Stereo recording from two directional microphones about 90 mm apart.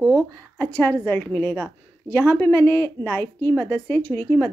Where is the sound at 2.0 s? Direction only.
25° left (ahead or behind).